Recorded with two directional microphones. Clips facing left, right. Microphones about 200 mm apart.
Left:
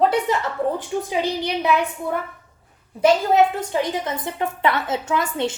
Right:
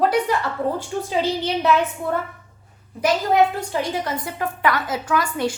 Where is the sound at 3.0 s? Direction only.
25° left (ahead or behind).